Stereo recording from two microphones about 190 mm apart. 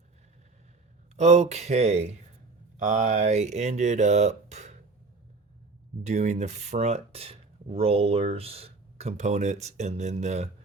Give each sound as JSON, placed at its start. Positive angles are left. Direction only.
{"t": 1.1, "sound": "speech", "side_deg": -35}
{"t": 6.0, "sound": "speech", "side_deg": -35}